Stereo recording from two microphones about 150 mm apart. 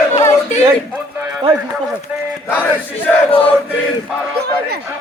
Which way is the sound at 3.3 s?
35° left (ahead or behind).